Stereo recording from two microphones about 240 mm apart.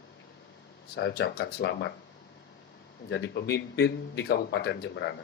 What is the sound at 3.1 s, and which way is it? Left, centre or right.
A man's voice, left.